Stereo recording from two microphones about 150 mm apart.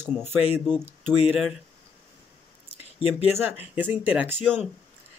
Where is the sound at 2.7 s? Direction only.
40° left (ahead or behind).